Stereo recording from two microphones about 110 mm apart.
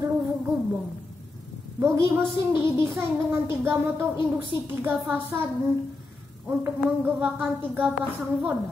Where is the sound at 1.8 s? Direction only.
25° right (ahead or behind).